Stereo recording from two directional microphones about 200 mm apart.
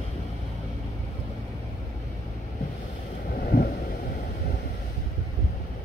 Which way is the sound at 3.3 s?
50° left (ahead or behind).